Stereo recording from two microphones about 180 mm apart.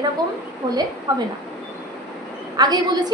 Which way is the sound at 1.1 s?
20° right (ahead or behind).